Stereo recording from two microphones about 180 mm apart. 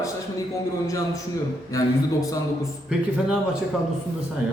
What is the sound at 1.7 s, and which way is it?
Speech, 20° left (ahead or behind).